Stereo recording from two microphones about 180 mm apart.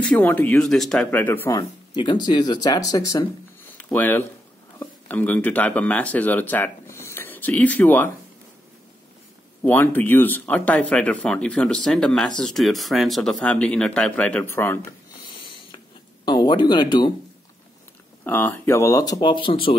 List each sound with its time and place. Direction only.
0.0 s speech: 10° left (ahead or behind)
1.5 s speech: 25° left (ahead or behind)
3.7 s speech: 10° left (ahead or behind)
9.6 s speech: 10° left (ahead or behind)
15.3 s a sound: 30° left (ahead or behind)
16.3 s speech: 25° left (ahead or behind)
18.2 s speech: 10° left (ahead or behind); by 19.7 s 30° left (ahead or behind)